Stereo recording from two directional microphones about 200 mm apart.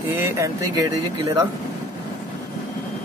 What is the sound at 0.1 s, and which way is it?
Speech, 10° right (ahead or behind).